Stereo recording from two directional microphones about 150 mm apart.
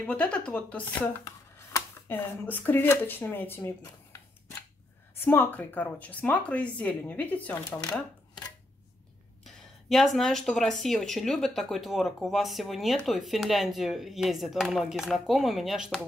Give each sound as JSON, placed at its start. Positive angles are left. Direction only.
{"t": 0.0, "sound": "speech", "side_deg": 10}
{"t": 1.2, "sound": "a sound", "side_deg": 25}
{"t": 2.1, "sound": "speech", "side_deg": 15}
{"t": 9.4, "sound": "speech", "side_deg": 0}